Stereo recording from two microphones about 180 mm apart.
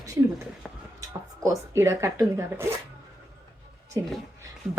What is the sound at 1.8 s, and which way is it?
Speech, 15° right (ahead or behind).